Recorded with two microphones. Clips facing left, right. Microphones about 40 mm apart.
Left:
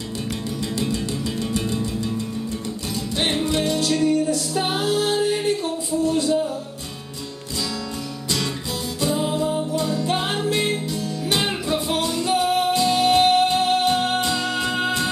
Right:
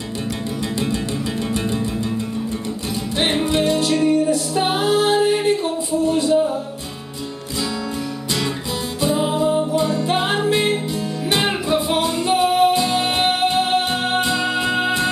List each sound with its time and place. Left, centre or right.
1.5 s music: right
3.2 s music: right
9.0 s music: right